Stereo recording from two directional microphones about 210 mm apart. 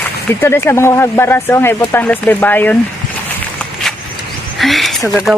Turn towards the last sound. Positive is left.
turn(degrees=0)  # may be behind; listen again after turning